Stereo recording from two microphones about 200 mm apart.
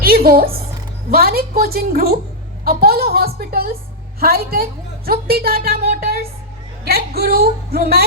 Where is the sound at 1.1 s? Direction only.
50° right (ahead or behind).